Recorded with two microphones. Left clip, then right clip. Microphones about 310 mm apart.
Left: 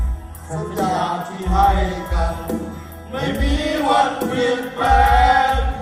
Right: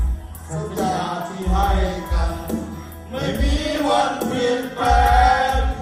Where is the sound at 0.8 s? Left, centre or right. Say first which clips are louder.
Left 3 dB; centre.